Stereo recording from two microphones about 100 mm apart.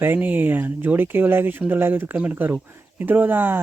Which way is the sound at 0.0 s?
20° right (ahead or behind).